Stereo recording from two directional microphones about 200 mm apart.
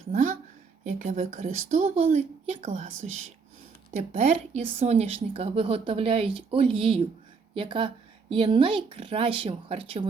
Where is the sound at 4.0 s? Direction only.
35° right (ahead or behind).